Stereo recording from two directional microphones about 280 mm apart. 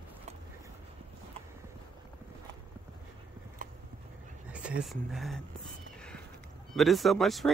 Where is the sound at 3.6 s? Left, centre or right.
Right.